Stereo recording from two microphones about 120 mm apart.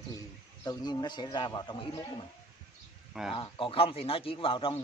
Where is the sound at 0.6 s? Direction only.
35° left (ahead or behind).